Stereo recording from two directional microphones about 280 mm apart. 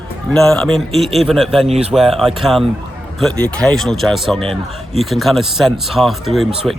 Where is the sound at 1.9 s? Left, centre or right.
Centre.